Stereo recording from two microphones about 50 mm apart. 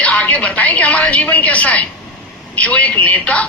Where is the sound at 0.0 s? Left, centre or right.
Left.